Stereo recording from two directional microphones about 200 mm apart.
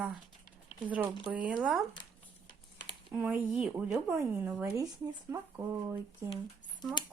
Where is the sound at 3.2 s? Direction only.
5° right (ahead or behind).